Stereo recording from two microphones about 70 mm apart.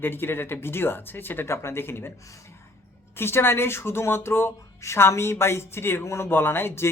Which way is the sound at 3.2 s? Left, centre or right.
Left.